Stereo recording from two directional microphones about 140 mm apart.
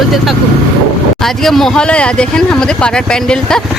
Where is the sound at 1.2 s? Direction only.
Centre (ahead or behind).